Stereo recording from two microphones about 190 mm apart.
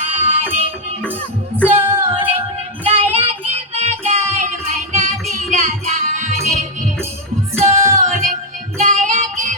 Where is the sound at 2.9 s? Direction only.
30° right (ahead or behind).